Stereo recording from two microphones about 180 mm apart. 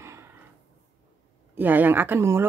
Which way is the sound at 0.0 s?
15° right (ahead or behind).